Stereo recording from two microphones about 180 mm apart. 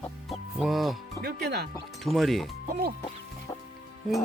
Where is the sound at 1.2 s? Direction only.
60° right (ahead or behind).